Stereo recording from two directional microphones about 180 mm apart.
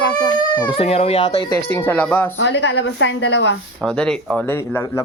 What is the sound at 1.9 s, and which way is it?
Speech, 10° left (ahead or behind).